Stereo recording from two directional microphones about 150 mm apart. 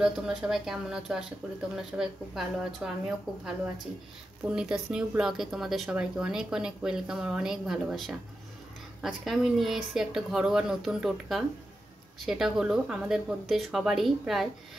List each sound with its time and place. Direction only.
0.0 s speech: 5° right (ahead or behind)
4.5 s speech: 5° right (ahead or behind)